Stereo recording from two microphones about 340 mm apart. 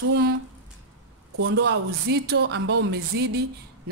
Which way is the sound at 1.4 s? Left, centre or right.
Right.